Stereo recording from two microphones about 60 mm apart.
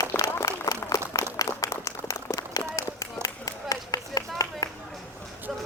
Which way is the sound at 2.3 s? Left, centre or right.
Left.